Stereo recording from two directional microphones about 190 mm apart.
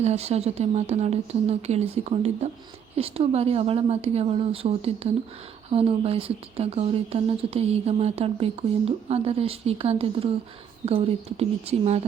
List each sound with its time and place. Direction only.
0.0 s speech: 35° right (ahead or behind)